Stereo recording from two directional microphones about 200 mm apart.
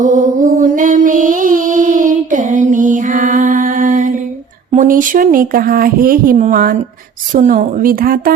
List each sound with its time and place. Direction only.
0.0 s mantra: 40° right (ahead or behind)
4.7 s speech: 40° right (ahead or behind)